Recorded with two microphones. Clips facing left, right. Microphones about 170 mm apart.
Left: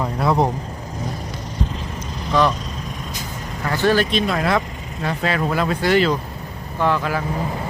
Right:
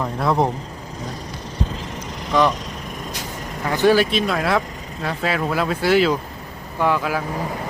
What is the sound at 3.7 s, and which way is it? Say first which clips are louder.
Speech: right 2 dB; 15° right (ahead or behind).